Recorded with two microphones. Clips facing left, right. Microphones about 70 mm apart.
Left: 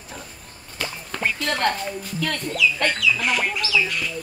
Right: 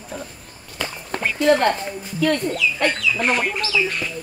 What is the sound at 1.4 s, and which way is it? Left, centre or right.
Speech, centre.